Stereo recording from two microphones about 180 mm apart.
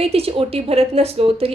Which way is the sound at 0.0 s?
35° right (ahead or behind).